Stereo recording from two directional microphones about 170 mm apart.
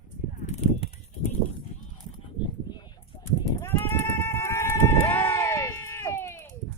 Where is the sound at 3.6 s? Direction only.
10° left (ahead or behind).